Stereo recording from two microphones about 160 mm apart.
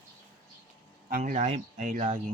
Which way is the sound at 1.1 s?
60° right (ahead or behind).